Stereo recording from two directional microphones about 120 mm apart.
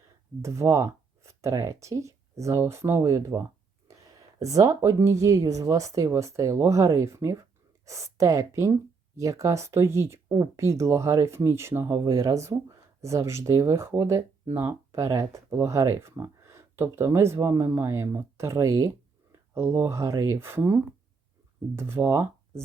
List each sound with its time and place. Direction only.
0.4 s speech: 25° right (ahead or behind)
3.8 s a sound: 30° right (ahead or behind)
5.2 s speech: 25° right (ahead or behind)